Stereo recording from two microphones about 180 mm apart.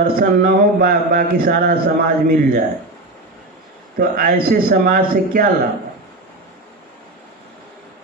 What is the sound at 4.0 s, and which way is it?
Mantra, 55° right (ahead or behind).